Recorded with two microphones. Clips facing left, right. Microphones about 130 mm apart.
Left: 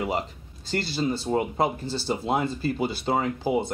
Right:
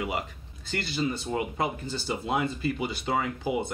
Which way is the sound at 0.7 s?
35° left (ahead or behind).